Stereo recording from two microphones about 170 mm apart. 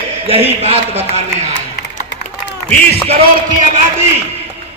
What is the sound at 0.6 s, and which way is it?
Speech, 40° right (ahead or behind).